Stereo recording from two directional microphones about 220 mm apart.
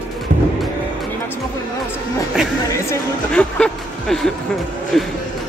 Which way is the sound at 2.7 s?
10° left (ahead or behind).